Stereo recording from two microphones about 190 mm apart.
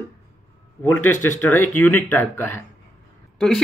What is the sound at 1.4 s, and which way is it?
A man's voice, 10° left (ahead or behind).